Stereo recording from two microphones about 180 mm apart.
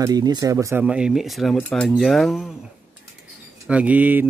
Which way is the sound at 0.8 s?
5° right (ahead or behind).